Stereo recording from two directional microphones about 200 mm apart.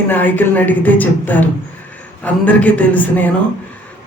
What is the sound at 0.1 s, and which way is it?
Speech, 10° left (ahead or behind).